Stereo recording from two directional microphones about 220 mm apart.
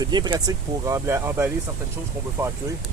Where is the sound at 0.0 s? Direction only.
20° right (ahead or behind).